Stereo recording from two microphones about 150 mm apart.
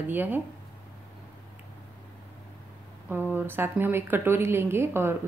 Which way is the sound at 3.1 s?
15° right (ahead or behind).